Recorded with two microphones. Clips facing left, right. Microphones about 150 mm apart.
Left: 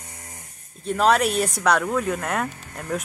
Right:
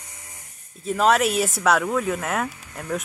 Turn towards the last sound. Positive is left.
turn(degrees=0)  # may be behind; listen again after turning